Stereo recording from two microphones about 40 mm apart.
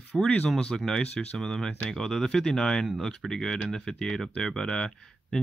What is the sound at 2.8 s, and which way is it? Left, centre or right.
Speech, centre.